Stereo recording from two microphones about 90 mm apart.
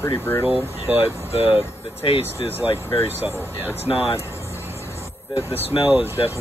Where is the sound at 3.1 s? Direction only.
20° right (ahead or behind).